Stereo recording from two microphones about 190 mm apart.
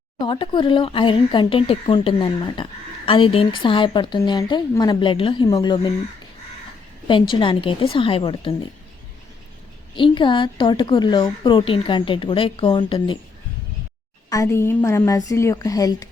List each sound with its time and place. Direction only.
0.2 s speech: 25° left (ahead or behind)
7.1 s speech: 25° left (ahead or behind)
9.9 s speech: 25° left (ahead or behind)
14.3 s a woman's voice: 15° left (ahead or behind)